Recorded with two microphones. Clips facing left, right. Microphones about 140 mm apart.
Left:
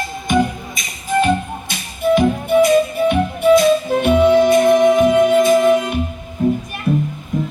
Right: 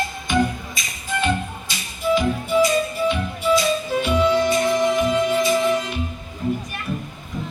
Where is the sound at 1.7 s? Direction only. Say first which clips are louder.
Left 5 dB; 55° left (ahead or behind).